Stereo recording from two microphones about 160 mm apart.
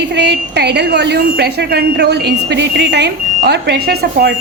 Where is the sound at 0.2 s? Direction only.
90° right.